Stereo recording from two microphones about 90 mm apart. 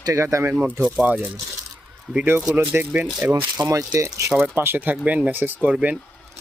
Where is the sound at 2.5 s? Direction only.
20° right (ahead or behind).